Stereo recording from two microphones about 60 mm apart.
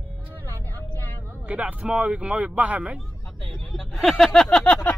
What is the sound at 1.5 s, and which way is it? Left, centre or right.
Speech, right.